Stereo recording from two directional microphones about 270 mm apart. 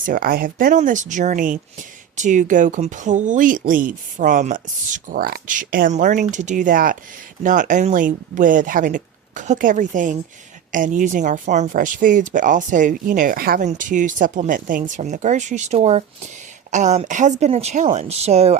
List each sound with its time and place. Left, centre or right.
0.0 s speech: right